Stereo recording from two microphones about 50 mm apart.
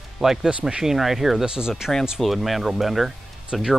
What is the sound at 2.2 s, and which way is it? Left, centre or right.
Speech, centre.